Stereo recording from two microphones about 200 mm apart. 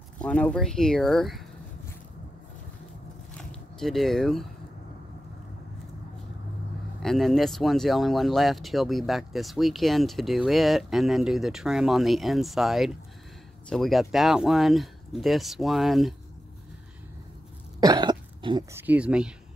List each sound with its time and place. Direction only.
0.2 s speech: 5° left (ahead or behind)
3.8 s speech: centre (ahead or behind)
7.0 s speech: centre (ahead or behind)
17.7 s cough: 20° right (ahead or behind)
18.8 s speech: 5° right (ahead or behind)